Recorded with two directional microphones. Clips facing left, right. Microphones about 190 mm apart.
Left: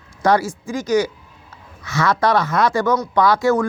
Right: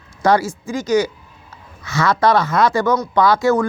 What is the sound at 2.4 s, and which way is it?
Speech, 25° right (ahead or behind).